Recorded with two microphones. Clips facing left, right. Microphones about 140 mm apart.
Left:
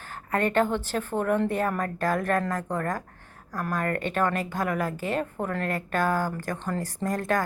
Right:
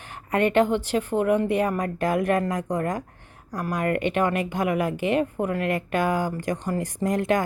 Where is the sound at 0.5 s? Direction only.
15° right (ahead or behind).